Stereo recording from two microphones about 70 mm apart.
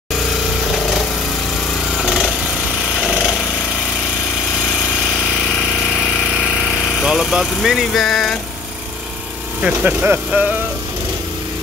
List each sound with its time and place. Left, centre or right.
2.0 s a sound: centre
5.9 s vehicle: centre
7.1 s speech: centre
9.6 s speech: centre
10.0 s speech: right